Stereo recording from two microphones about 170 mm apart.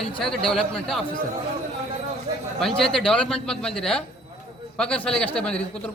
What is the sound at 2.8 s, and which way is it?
A man's voice, centre (ahead or behind).